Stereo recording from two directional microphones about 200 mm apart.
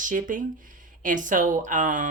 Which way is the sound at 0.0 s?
40° right (ahead or behind).